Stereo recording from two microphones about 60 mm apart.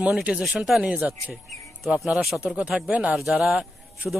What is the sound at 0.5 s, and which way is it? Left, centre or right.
Speech, centre.